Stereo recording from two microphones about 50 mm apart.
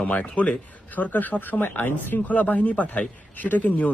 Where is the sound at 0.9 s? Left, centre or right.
Left.